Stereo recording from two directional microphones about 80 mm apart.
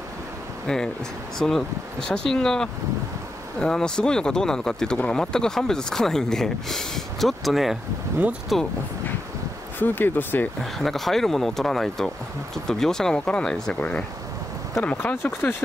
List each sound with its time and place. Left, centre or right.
1.4 s speech: centre
9.8 s speech: left
10.6 s speech: centre; by 15.5 s left